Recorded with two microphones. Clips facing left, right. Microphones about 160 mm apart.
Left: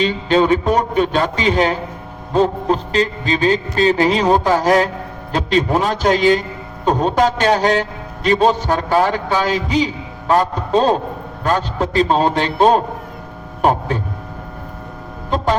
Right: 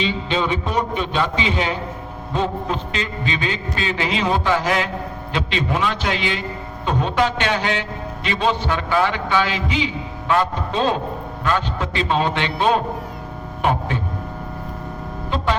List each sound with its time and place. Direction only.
0.0 s a man's voice: 45° left (ahead or behind)